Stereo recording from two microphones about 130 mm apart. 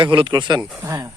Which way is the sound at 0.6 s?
10° right (ahead or behind).